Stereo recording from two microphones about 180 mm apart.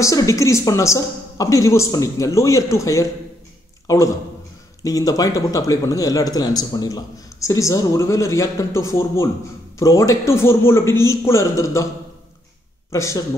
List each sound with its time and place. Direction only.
0.0 s a woman's voice: 20° left (ahead or behind)
12.9 s a woman's voice: 15° left (ahead or behind)